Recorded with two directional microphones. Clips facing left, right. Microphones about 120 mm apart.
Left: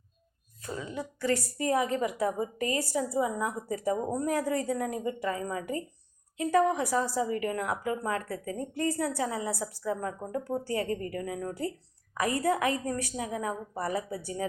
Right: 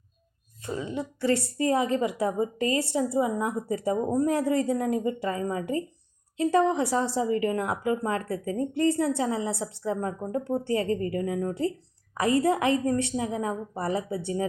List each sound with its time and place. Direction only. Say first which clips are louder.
0.6 s a woman's voice: right 5 dB; 25° right (ahead or behind)